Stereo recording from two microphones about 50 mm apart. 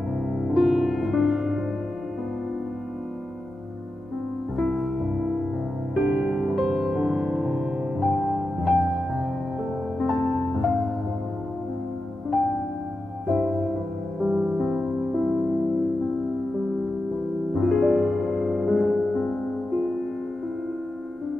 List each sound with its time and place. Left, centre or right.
0.4 s music: centre
4.6 s music: centre
5.9 s music: centre
13.4 s music: centre
14.2 s music: right
15.1 s music: centre
17.6 s music: centre